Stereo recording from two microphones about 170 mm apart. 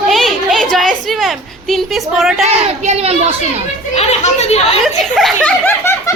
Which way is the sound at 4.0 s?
40° left (ahead or behind).